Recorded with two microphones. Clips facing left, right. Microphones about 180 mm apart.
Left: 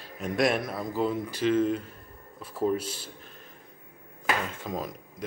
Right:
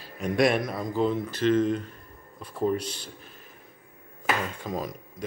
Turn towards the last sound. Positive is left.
turn(degrees=0)  # may be behind; listen again after turning